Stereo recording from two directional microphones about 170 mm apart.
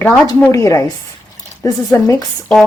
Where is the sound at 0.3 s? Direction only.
15° left (ahead or behind).